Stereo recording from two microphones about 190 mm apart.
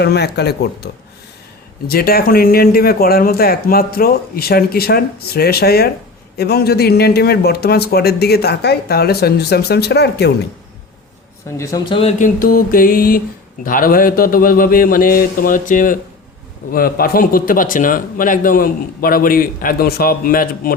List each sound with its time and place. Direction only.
0.0 s a man's voice: 60° left (ahead or behind)
1.9 s a man's voice: 55° left (ahead or behind)
11.5 s a man's voice: 15° left (ahead or behind)
11.9 s a sound: 35° left (ahead or behind)
12.4 s a man's voice: 50° left (ahead or behind)